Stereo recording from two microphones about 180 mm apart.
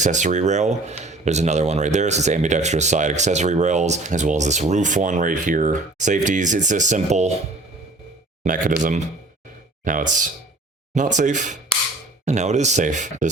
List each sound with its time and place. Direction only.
0.0 s speech: 40° right (ahead or behind)
8.4 s speech: 45° right (ahead or behind)